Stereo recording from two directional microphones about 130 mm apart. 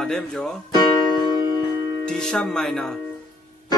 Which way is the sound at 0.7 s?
35° left (ahead or behind).